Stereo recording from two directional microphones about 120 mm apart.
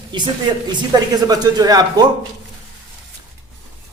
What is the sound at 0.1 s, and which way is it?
Speech, 40° right (ahead or behind).